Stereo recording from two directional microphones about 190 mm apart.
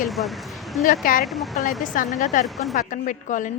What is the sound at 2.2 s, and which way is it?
A woman's voice, 40° left (ahead or behind).